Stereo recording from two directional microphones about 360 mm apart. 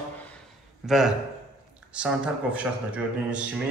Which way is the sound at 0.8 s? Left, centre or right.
Centre.